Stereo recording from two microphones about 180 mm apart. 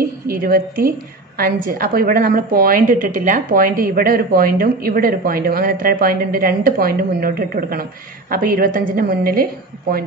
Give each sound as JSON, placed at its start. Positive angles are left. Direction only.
{"t": 0.3, "sound": "a woman's voice", "side_deg": -55}